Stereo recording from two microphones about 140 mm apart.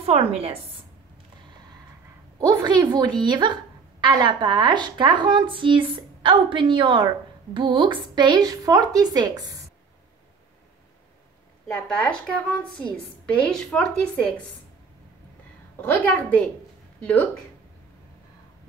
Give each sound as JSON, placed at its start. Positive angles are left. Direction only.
{"t": 0.0, "sound": "a woman's voice", "side_deg": -45}
{"t": 2.4, "sound": "a woman's voice", "side_deg": -30}
{"t": 11.6, "sound": "a woman's voice", "side_deg": 5}
{"t": 15.8, "sound": "a woman's voice", "side_deg": 15}